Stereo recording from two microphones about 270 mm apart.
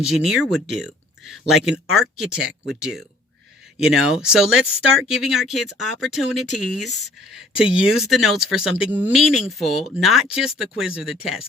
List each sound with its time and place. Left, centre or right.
0.0 s speech: centre